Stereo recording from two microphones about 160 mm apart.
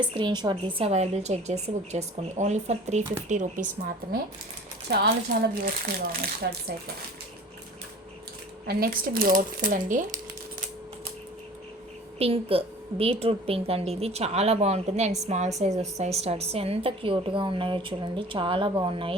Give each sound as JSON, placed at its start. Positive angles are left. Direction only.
{"t": 0.0, "sound": "a woman's voice", "side_deg": -30}
{"t": 4.9, "sound": "speech", "side_deg": -90}
{"t": 8.6, "sound": "speech", "side_deg": -70}
{"t": 12.2, "sound": "a woman's voice", "side_deg": -35}